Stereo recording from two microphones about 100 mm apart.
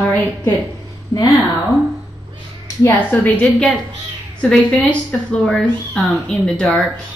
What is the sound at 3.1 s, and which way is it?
A woman's voice, 15° left (ahead or behind).